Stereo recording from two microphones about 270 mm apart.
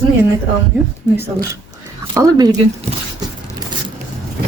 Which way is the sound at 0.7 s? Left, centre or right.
Centre.